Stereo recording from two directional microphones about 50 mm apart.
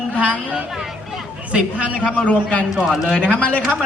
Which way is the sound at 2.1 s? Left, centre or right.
Left.